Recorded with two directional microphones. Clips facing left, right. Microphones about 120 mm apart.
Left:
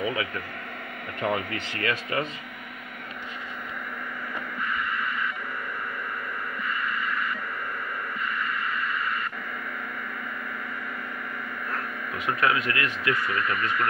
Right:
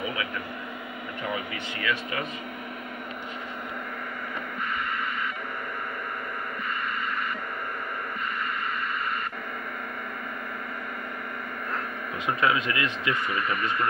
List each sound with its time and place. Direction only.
1.2 s speech: 50° left (ahead or behind)
12.3 s speech: 20° right (ahead or behind)